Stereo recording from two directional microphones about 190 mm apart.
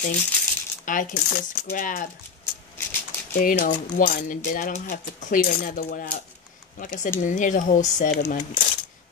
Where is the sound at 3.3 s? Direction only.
45° left (ahead or behind).